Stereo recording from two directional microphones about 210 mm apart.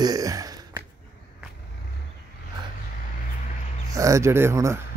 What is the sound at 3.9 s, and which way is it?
Speech, 15° right (ahead or behind).